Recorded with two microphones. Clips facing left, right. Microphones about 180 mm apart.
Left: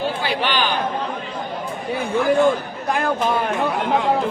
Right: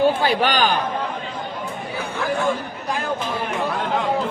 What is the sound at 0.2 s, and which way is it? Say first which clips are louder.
Speech: right 3 dB; 45° right (ahead or behind).